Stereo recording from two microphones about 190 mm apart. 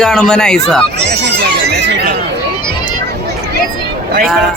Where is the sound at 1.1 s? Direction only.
60° right (ahead or behind).